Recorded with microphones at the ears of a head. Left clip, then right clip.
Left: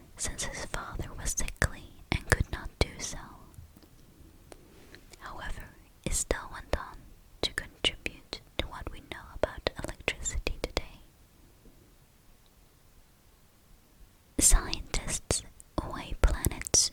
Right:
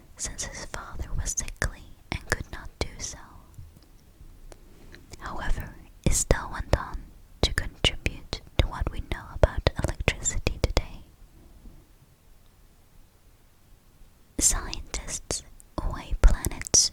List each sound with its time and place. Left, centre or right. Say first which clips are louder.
0.3 s whispering: even; centre
5.1 s whispering: right 6 dB; right
14.3 s whispering: right 1 dB; centre